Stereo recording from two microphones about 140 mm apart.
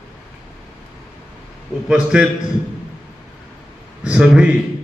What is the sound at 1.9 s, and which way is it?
Speech, 5° right (ahead or behind).